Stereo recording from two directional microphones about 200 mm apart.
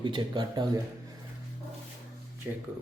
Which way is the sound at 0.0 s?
25° right (ahead or behind).